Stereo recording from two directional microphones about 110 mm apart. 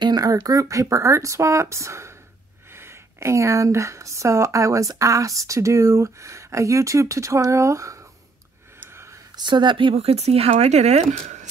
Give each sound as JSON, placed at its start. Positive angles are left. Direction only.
{"t": 0.0, "sound": "speech", "side_deg": -35}
{"t": 8.7, "sound": "a sound", "side_deg": -20}
{"t": 9.4, "sound": "speech", "side_deg": -45}
{"t": 9.9, "sound": "speech", "side_deg": -75}